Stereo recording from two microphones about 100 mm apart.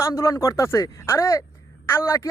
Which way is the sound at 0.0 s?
30° left (ahead or behind).